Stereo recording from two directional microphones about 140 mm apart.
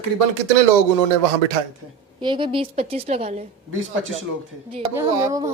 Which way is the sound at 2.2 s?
35° right (ahead or behind).